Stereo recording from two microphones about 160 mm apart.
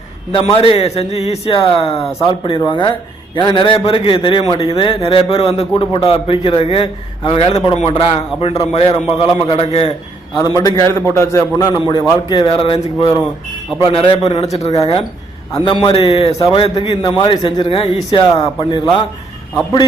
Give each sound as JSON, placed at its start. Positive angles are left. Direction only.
{"t": 0.3, "sound": "a man's voice", "side_deg": 35}
{"t": 10.3, "sound": "a man's voice", "side_deg": 25}
{"t": 15.5, "sound": "a man's voice", "side_deg": 30}